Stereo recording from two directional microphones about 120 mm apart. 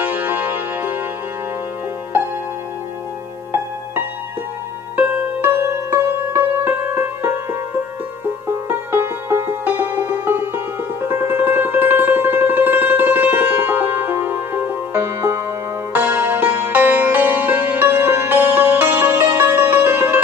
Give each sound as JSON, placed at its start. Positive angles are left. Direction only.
{"t": 0.0, "sound": "music", "side_deg": -15}
{"t": 4.9, "sound": "music", "side_deg": -15}
{"t": 8.5, "sound": "music", "side_deg": -20}